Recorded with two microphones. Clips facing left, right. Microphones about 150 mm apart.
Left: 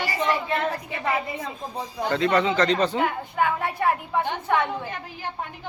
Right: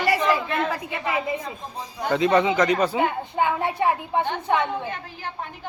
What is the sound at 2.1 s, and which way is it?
Speech, 15° right (ahead or behind).